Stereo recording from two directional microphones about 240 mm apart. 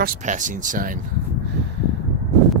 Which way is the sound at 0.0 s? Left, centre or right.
Right.